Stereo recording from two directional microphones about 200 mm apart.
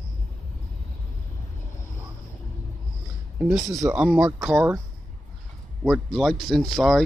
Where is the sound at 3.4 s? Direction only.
Centre (ahead or behind).